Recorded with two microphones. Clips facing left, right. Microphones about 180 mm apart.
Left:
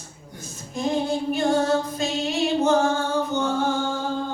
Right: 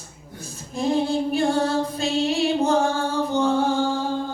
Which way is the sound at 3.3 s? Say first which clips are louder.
Right 4 dB; 30° right (ahead or behind).